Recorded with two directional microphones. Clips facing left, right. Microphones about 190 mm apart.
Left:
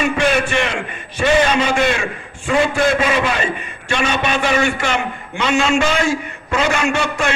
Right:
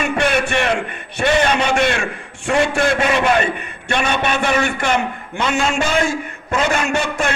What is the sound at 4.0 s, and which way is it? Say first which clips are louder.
A man's voice: even; 55° right (ahead or behind).